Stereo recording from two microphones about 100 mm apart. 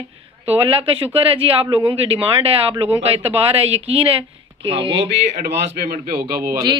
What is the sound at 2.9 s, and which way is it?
Speech, 90° right.